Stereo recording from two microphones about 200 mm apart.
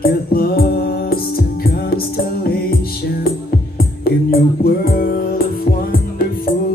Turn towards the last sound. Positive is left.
turn(degrees=45)  # may be behind; listen again after turning